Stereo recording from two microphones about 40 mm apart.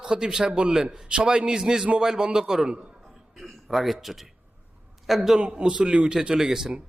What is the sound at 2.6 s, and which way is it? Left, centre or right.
Speech, right.